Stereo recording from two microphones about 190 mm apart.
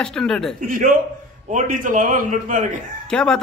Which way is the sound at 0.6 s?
45° right (ahead or behind).